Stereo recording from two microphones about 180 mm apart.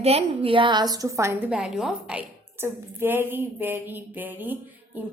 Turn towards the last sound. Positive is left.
turn(degrees=-10)  # may be behind; listen again after turning